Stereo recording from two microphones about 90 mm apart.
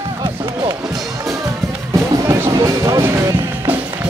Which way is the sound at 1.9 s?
35° right (ahead or behind).